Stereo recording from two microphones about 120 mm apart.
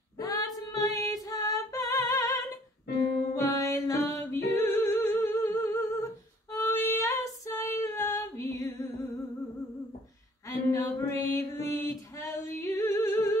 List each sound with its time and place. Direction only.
0.2 s female singing: 30° left (ahead or behind)
0.7 s music: 30° left (ahead or behind)
4.1 s singing: 25° left (ahead or behind)
6.5 s female singing: 20° left (ahead or behind)
10.4 s a sound: 30° left (ahead or behind)